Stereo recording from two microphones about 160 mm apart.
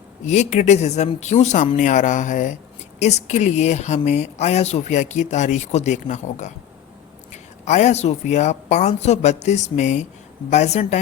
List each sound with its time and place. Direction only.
0.3 s a woman's voice: 45° left (ahead or behind)
7.6 s a woman's voice: 45° left (ahead or behind)